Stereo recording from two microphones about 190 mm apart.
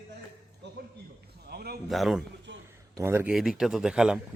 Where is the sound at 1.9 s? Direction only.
Centre (ahead or behind).